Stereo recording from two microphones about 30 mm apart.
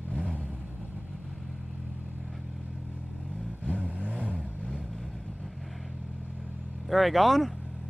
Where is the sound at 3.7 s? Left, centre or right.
Right.